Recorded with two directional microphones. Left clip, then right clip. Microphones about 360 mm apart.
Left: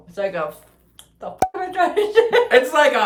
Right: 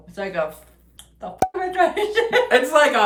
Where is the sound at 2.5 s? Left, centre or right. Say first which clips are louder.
Even; centre.